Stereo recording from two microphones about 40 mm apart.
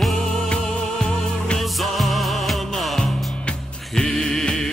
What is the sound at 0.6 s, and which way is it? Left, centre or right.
Music, centre.